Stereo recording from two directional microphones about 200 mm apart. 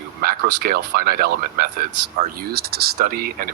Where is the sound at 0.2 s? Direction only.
50° right (ahead or behind).